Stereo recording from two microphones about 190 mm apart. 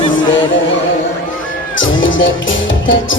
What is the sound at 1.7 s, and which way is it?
Music, 90° left.